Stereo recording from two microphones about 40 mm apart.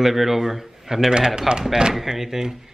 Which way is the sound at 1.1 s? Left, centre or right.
Centre.